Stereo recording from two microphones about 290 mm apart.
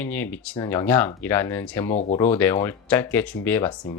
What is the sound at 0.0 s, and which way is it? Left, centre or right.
Speech, centre.